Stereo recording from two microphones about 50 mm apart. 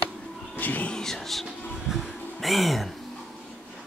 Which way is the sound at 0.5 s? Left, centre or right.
Left.